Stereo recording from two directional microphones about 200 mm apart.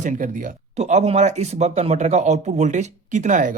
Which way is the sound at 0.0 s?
40° right (ahead or behind).